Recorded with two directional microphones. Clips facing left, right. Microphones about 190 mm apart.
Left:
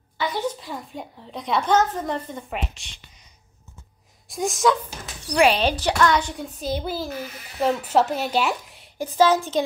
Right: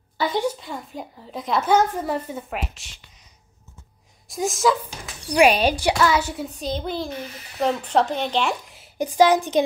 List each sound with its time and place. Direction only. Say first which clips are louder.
0.3 s a woman's voice: right 3 dB; 15° right (ahead or behind)
0.6 s a child's voice: right 1 dB; centre (ahead or behind)
4.3 s speech: even; centre (ahead or behind)
5.4 s a child's voice: right 2 dB; 10° right (ahead or behind)
8.9 s speech: right 2 dB; 15° right (ahead or behind)